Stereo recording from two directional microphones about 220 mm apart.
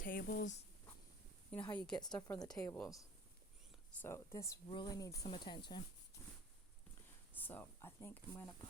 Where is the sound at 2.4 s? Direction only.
15° left (ahead or behind).